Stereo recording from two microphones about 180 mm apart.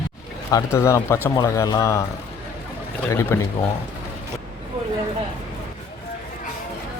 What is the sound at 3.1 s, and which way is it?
Speech, 15° left (ahead or behind).